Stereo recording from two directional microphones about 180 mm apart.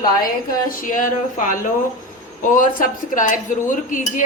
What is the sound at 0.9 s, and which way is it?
Speech, 45° left (ahead or behind).